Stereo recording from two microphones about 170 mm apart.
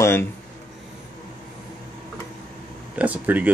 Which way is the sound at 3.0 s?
10° right (ahead or behind).